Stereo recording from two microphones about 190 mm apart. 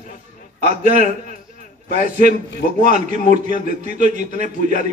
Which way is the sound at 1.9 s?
40° right (ahead or behind).